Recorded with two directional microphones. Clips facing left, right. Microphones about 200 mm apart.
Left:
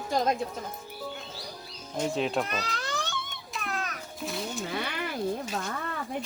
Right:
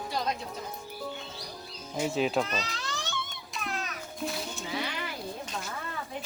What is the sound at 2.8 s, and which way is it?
Baby cry, 60° left (ahead or behind).